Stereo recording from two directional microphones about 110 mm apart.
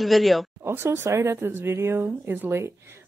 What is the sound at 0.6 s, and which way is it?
Speech, 20° right (ahead or behind).